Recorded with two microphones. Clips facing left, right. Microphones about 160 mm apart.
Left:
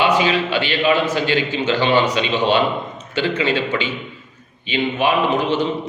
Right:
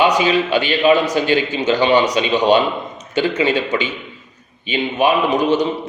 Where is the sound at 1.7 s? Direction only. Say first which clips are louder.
Right 3 dB; 15° right (ahead or behind).